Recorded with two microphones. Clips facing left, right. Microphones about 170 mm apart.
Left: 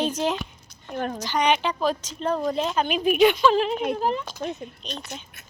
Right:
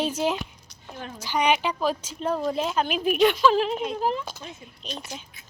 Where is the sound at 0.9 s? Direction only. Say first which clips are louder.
Left 10 dB; 60° left (ahead or behind).